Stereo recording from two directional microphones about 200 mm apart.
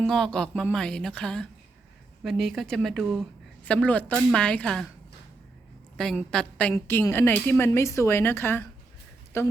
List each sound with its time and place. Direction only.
0.0 s a woman's voice: 5° left (ahead or behind)
6.0 s a woman's voice: 5° left (ahead or behind)